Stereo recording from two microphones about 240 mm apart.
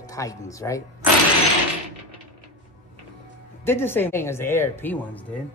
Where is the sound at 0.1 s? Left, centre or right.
Centre.